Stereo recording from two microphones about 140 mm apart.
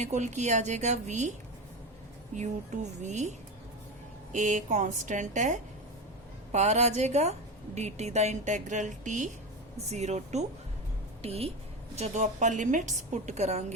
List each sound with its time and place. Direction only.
0.0 s a woman's voice: 55° right (ahead or behind)
2.3 s a woman's voice: 60° right (ahead or behind)